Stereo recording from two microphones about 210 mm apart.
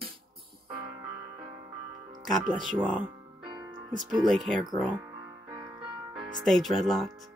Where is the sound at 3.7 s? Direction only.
Centre (ahead or behind).